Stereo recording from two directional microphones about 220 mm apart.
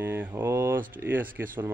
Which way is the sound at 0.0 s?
10° right (ahead or behind).